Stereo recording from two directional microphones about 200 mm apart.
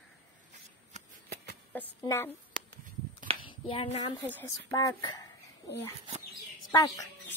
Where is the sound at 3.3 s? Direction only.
30° right (ahead or behind).